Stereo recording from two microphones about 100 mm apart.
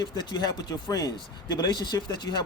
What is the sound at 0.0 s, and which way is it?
Speech, 45° left (ahead or behind).